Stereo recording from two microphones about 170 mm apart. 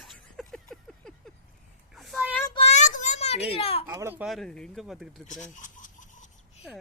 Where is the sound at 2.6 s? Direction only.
45° left (ahead or behind).